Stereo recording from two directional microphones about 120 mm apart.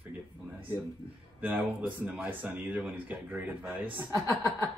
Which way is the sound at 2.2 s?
15° right (ahead or behind).